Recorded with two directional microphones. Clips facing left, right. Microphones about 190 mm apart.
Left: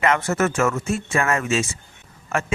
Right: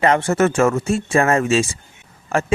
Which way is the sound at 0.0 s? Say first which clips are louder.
Right 4 dB; 30° right (ahead or behind).